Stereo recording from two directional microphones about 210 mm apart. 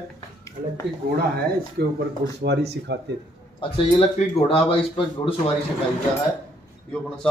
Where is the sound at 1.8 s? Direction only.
50° right (ahead or behind).